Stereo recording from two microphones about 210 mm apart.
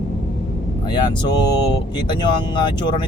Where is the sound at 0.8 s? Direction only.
20° left (ahead or behind).